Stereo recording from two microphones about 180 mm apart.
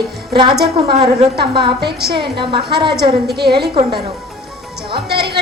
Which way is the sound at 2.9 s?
65° right (ahead or behind).